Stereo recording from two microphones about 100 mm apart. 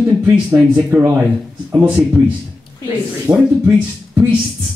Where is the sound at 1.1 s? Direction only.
20° right (ahead or behind).